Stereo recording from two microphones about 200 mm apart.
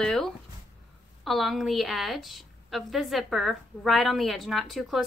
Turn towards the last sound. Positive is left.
turn(degrees=0)  # may be behind; listen again after turning